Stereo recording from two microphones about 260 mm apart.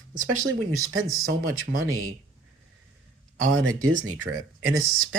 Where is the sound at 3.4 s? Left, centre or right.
Right.